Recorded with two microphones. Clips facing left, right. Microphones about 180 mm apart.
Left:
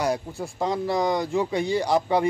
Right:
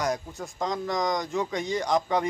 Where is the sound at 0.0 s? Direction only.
30° left (ahead or behind).